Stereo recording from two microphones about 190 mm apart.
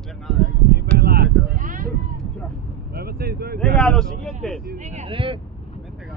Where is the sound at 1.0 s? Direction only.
55° right (ahead or behind).